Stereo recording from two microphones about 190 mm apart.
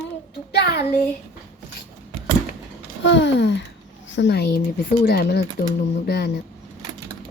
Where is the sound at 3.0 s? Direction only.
70° left (ahead or behind).